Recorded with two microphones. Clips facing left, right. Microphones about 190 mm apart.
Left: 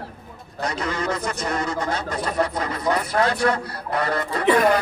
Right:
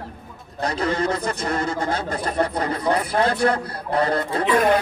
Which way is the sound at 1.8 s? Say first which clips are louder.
Right 1 dB; 55° right (ahead or behind).